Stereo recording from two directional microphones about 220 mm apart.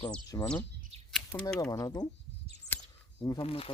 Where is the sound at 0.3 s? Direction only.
15° left (ahead or behind).